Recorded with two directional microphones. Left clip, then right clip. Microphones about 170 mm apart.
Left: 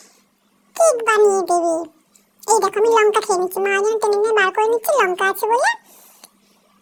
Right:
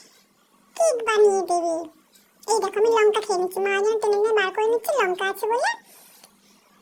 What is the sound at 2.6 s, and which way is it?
A child's voice, 30° left (ahead or behind).